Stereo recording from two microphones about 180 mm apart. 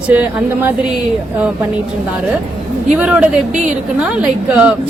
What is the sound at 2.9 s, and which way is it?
Speech, 5° right (ahead or behind).